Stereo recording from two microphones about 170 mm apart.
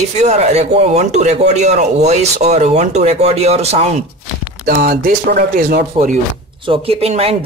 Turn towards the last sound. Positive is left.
turn(degrees=-35)  # may be behind; listen again after turning